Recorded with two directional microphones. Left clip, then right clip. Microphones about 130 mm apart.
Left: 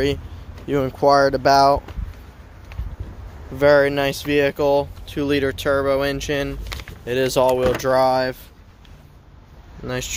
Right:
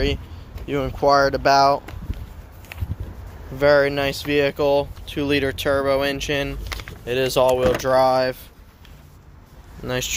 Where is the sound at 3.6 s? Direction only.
55° left (ahead or behind); by 6.6 s 35° left (ahead or behind).